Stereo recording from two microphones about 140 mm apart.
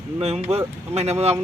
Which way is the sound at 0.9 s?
50° right (ahead or behind).